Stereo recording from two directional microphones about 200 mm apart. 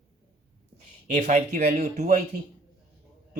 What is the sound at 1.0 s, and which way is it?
Speech, 40° right (ahead or behind).